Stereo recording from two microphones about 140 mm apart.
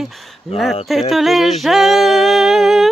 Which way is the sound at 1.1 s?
Centre (ahead or behind).